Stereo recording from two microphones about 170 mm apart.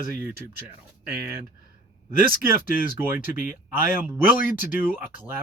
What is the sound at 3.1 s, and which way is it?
Speech, 10° right (ahead or behind).